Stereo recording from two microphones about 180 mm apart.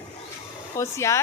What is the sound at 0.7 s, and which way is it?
Speech, 15° left (ahead or behind).